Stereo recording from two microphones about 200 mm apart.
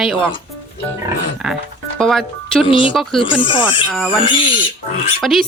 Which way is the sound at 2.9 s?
Centre (ahead or behind).